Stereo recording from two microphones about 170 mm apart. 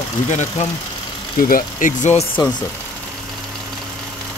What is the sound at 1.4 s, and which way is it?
Speech, 50° left (ahead or behind).